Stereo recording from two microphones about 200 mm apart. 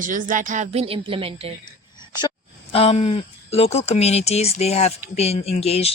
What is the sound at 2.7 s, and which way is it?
Speech, 30° left (ahead or behind).